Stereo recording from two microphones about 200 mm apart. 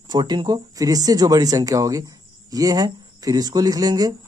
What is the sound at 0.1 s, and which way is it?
Speech, 20° right (ahead or behind).